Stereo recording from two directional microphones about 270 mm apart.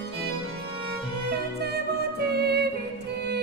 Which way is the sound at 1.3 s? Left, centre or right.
Right.